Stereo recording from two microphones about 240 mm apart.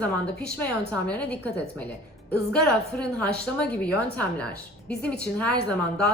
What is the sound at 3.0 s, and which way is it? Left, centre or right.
A woman's voice, centre.